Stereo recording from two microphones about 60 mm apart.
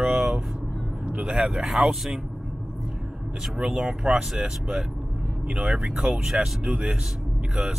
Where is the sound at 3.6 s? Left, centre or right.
Centre.